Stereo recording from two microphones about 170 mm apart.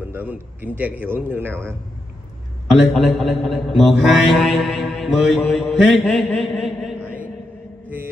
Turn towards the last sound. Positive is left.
turn(degrees=-5)  # may be behind; listen again after turning